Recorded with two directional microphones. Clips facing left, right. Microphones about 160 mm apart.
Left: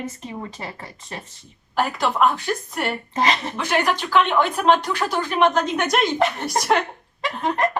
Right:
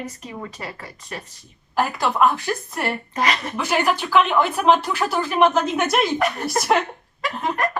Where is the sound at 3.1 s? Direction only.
25° left (ahead or behind).